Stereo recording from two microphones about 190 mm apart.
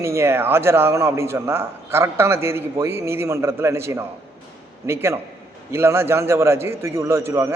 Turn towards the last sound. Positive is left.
turn(degrees=-15)  # may be behind; listen again after turning